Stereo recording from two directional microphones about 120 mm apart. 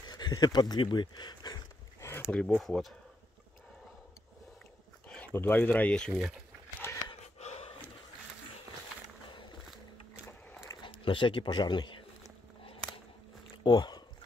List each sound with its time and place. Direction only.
0.0 s speech: 35° left (ahead or behind)
2.0 s a sound: 25° left (ahead or behind)
2.3 s speech: 5° left (ahead or behind)
5.0 s dog: 10° left (ahead or behind)
5.3 s speech: 15° left (ahead or behind)
6.8 s a sound: 20° left (ahead or behind)
7.3 s pant: 60° left (ahead or behind)
10.7 s speech: 45° left (ahead or behind)
13.7 s speech: 35° left (ahead or behind)